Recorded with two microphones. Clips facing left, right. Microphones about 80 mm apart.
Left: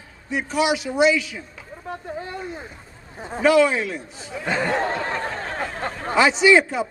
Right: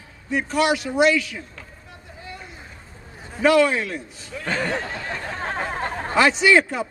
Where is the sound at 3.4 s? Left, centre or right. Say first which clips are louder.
Even; centre.